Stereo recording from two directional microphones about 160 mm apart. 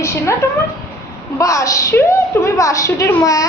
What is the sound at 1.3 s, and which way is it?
A woman's voice, 20° left (ahead or behind).